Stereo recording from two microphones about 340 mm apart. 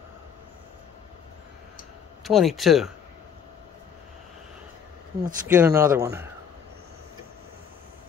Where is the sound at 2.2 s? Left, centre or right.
Centre.